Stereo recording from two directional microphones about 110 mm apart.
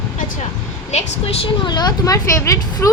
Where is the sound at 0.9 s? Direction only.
60° left (ahead or behind).